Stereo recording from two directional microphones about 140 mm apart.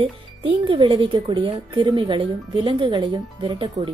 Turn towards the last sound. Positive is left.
turn(degrees=-35)  # may be behind; listen again after turning